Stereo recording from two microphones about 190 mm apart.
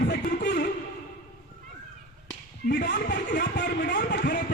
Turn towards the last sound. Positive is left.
turn(degrees=55)  # may be behind; listen again after turning